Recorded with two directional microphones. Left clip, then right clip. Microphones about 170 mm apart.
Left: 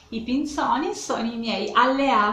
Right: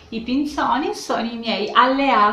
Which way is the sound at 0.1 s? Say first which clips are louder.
Right 3 dB; 5° left (ahead or behind).